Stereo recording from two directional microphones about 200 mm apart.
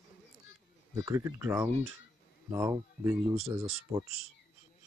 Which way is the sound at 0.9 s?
15° right (ahead or behind).